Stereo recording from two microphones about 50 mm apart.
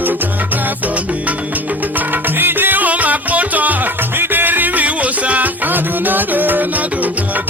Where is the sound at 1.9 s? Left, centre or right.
Right.